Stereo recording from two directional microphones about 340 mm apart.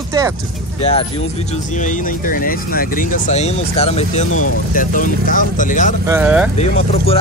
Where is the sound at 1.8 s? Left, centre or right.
Left.